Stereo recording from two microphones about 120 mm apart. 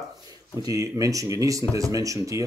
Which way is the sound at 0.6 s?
30° right (ahead or behind).